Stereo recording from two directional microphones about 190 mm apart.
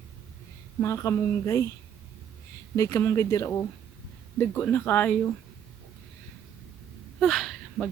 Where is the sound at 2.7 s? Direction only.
15° left (ahead or behind).